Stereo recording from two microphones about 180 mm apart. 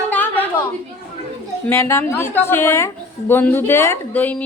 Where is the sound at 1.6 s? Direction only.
15° left (ahead or behind).